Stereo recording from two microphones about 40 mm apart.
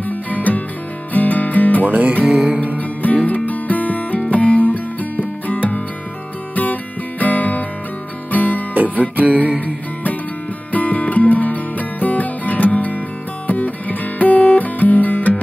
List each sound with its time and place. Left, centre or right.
0.0 s music: left
1.9 s music: right
2.3 s music: right
3.3 s music: left
8.7 s music: right
10.7 s music: left
13.5 s guitar: left